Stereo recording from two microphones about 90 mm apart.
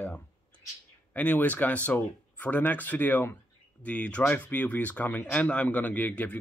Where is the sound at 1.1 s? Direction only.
15° left (ahead or behind).